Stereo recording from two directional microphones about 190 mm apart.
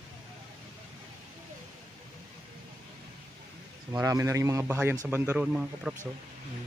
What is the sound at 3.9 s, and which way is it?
A man's voice, 20° right (ahead or behind).